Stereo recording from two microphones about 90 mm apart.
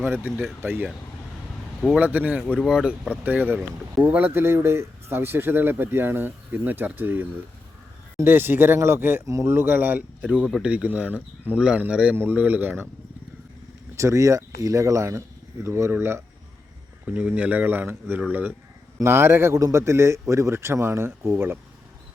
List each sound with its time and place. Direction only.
0.0 s speech: 20° right (ahead or behind)
2.0 s speech: 20° right (ahead or behind)
2.6 s speech: 5° right (ahead or behind); by 12.9 s 20° right (ahead or behind)
13.9 s speech: 35° right (ahead or behind)
17.1 s speech: 15° right (ahead or behind)